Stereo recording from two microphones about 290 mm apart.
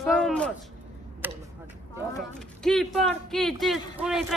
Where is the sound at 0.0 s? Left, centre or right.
Centre.